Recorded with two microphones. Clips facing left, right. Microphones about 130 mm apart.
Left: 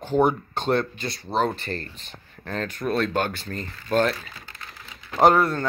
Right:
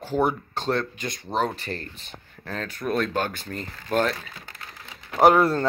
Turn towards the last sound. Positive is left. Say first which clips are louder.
# right 2 dB
turn(degrees=-25)  # may be behind; listen again after turning